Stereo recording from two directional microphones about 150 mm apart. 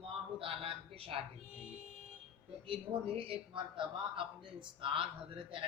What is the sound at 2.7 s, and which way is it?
A man's voice, 40° right (ahead or behind).